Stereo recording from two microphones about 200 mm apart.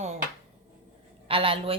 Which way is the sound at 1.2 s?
25° right (ahead or behind).